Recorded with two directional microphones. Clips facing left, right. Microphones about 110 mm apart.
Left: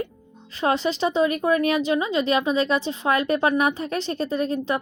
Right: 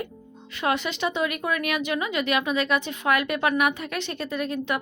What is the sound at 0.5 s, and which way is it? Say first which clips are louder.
Speech: left 4 dB; 35° left (ahead or behind).